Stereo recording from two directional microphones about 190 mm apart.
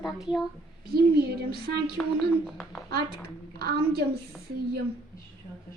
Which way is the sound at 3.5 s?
55° right (ahead or behind).